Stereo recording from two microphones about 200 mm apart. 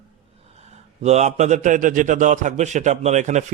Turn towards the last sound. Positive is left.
turn(degrees=-35)  # may be behind; listen again after turning